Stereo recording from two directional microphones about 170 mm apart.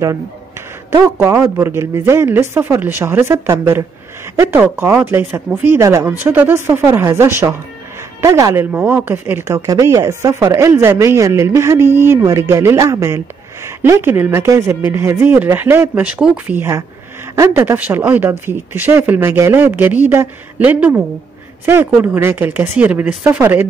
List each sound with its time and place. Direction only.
0.9 s a woman's voice: 15° right (ahead or behind)